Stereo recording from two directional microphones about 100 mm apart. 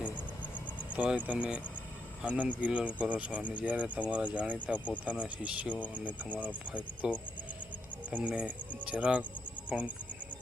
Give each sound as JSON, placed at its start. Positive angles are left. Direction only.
{"t": 0.9, "sound": "speech", "side_deg": -10}